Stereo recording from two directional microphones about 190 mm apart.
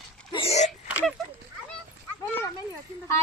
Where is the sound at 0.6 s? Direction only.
5° right (ahead or behind).